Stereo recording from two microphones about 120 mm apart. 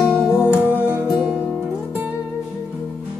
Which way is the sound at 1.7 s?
15° right (ahead or behind).